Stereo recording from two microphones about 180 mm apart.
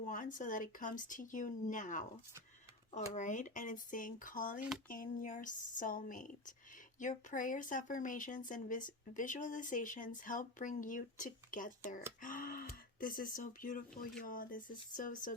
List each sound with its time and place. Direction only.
0.0 s speech: 45° left (ahead or behind)